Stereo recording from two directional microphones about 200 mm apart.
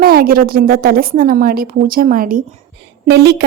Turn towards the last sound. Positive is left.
turn(degrees=-55)  # may be behind; listen again after turning